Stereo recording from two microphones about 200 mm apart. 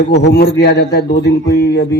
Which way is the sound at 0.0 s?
60° left (ahead or behind).